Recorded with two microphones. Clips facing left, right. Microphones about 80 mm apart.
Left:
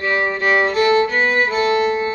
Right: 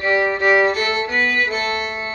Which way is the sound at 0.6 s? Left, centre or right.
Left.